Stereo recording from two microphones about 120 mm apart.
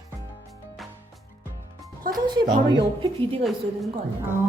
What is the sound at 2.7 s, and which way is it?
Speech, 45° right (ahead or behind).